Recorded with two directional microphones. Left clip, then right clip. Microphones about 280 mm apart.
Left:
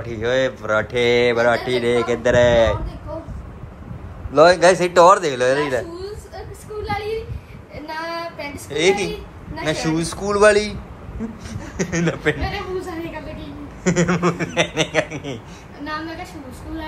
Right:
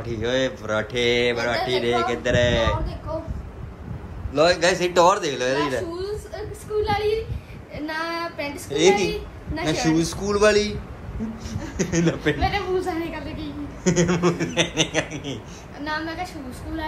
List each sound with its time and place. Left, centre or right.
0.0 s speech: centre
4.3 s speech: centre
6.3 s a sound: centre
7.8 s child singing: centre
8.6 s speech: centre
12.4 s speech: centre